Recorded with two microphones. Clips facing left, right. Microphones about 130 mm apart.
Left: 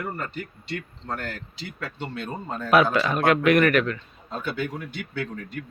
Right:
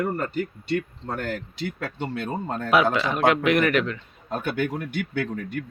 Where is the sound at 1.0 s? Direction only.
15° right (ahead or behind).